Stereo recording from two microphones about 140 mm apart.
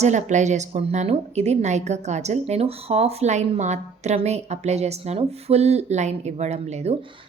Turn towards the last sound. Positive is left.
turn(degrees=-50)  # may be behind; listen again after turning